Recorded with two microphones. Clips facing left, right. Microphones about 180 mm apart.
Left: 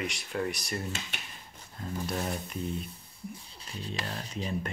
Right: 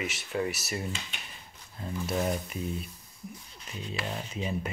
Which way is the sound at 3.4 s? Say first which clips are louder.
Even; 30° left (ahead or behind).